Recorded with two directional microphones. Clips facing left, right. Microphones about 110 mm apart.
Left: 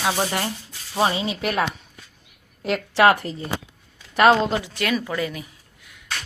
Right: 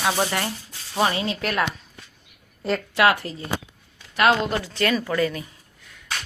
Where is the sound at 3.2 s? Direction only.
25° left (ahead or behind).